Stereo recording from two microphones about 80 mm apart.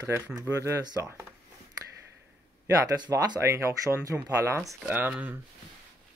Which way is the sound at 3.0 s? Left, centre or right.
Right.